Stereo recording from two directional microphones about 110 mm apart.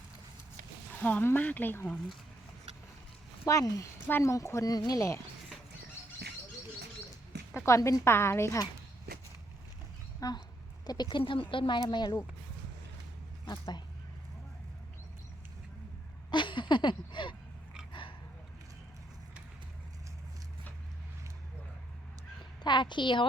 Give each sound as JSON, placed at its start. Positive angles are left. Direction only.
{"t": 1.0, "sound": "speech", "side_deg": 15}
{"t": 3.4, "sound": "a woman's voice", "side_deg": 30}
{"t": 7.5, "sound": "a woman's voice", "side_deg": 25}
{"t": 10.2, "sound": "speech", "side_deg": 35}
{"t": 11.3, "sound": "a woman's voice", "side_deg": 50}
{"t": 13.5, "sound": "speech", "side_deg": 40}
{"t": 16.3, "sound": "a sound", "side_deg": 45}
{"t": 22.6, "sound": "a sound", "side_deg": 45}